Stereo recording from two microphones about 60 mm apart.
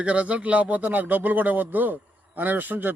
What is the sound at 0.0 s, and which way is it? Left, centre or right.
Speech, right.